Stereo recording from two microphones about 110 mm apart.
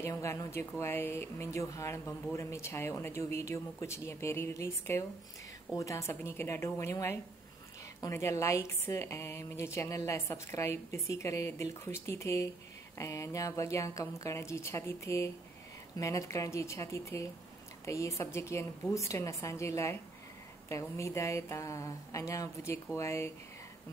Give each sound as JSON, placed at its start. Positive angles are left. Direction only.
{"t": 0.0, "sound": "a woman's voice", "side_deg": 25}